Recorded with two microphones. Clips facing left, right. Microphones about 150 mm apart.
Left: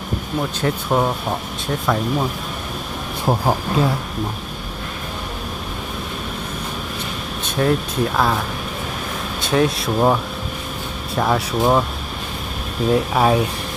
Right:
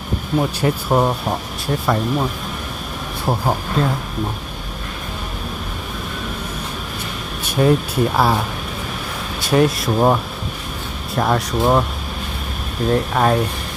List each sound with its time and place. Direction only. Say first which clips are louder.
0.6 s speech: even; 5° right (ahead or behind)
3.2 s speech: left 1 dB; 5° left (ahead or behind)
7.4 s speech: right 3 dB; 5° right (ahead or behind)
9.5 s speech: right 2 dB; centre (ahead or behind)
12.9 s speech: even; 5° left (ahead or behind)